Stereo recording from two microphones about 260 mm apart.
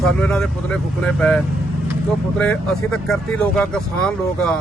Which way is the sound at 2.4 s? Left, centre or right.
Centre.